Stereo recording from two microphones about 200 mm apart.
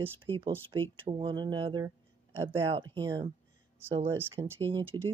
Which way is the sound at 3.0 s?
20° right (ahead or behind).